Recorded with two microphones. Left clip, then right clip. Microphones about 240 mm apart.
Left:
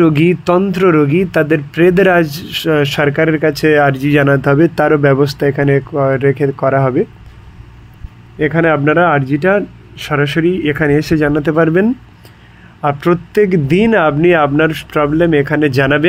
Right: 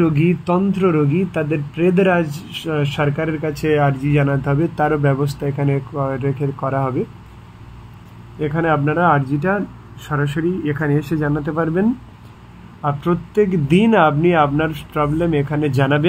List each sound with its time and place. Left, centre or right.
0.0 s speech: left
8.4 s speech: left